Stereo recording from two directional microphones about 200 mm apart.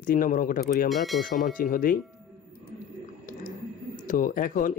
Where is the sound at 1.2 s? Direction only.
40° left (ahead or behind).